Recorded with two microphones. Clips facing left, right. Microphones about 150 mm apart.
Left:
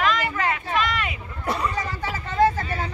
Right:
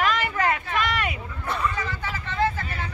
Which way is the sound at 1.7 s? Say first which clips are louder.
Left 2 dB; 35° left (ahead or behind).